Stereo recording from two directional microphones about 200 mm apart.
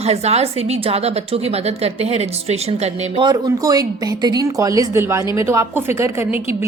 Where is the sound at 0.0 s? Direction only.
30° right (ahead or behind).